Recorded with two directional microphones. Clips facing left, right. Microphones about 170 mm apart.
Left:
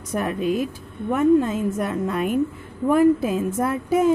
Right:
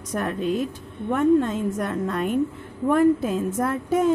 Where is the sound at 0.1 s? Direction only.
10° left (ahead or behind).